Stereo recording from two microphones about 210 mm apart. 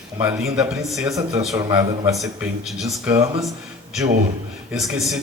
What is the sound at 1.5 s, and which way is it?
Speech, 15° right (ahead or behind).